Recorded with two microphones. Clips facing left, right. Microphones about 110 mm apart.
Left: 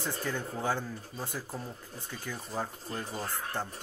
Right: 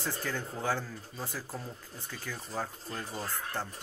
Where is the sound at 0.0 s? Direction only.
15° left (ahead or behind).